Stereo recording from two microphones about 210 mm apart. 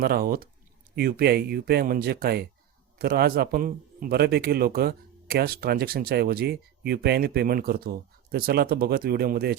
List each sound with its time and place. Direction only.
0.0 s a man's voice: 45° right (ahead or behind)